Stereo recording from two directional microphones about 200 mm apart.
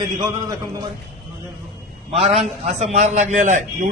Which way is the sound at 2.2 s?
30° right (ahead or behind).